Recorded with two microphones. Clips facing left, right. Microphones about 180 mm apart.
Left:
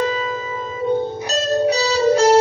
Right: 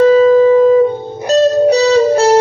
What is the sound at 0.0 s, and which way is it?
Music, 50° right (ahead or behind).